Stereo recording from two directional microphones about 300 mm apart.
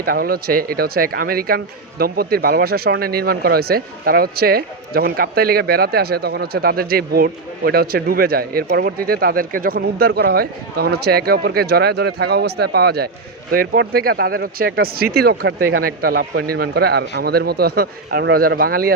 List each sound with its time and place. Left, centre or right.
0.0 s speech: right